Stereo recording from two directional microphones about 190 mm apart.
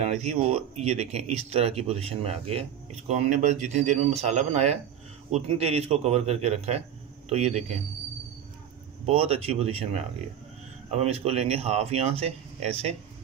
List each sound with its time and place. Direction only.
0.0 s speech: 35° right (ahead or behind)
9.0 s speech: 30° right (ahead or behind)